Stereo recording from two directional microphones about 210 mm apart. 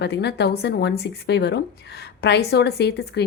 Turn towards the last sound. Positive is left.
turn(degrees=50)  # may be behind; listen again after turning